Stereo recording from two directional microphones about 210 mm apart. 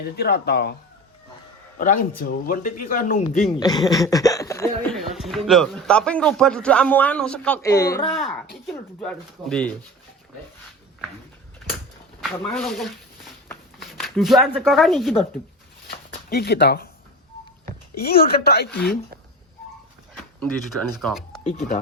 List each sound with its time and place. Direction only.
0.0 s speech: 50° left (ahead or behind)
1.8 s speech: 40° left (ahead or behind)
3.6 s speech: 20° left (ahead or behind)
4.9 s a man's voice: centre (ahead or behind)
8.1 s a man's voice: centre (ahead or behind)
12.4 s speech: 5° left (ahead or behind)
15.9 s a sound: 50° left (ahead or behind)
18.0 s speech: 50° left (ahead or behind)
20.4 s a man's voice: 5° left (ahead or behind)